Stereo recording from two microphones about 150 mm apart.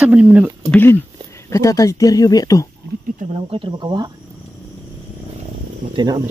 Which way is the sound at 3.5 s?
35° right (ahead or behind).